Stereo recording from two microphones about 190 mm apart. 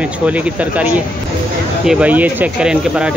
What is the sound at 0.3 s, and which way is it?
Speech, 5° right (ahead or behind).